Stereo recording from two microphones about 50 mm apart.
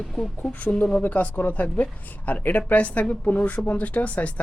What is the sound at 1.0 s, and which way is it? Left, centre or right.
A woman's voice, left.